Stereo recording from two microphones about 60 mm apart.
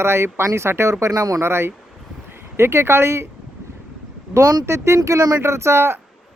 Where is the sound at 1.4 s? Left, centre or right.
Right.